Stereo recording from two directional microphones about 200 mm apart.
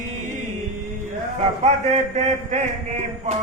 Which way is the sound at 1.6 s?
35° right (ahead or behind).